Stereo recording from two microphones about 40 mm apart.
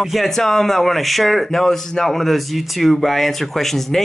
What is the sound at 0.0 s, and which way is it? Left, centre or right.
Speech, centre.